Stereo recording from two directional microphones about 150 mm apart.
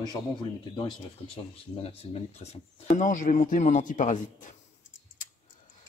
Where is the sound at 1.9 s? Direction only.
45° left (ahead or behind); by 4.5 s 60° left (ahead or behind).